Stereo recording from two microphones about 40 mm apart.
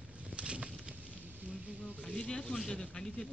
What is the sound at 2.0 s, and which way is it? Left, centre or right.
A man's voice, left.